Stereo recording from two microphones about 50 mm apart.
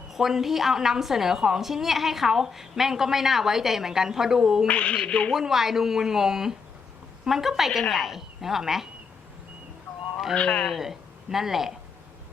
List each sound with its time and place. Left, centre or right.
0.1 s a woman's voice: centre
4.7 s speech: left
5.3 s a woman's voice: centre
10.3 s speech: left
10.7 s speech: centre